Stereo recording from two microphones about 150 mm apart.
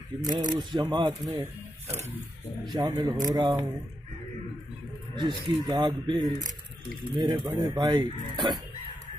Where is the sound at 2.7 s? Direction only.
30° right (ahead or behind).